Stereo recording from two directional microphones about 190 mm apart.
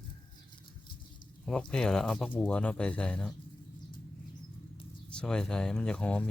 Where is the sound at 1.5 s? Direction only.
5° left (ahead or behind).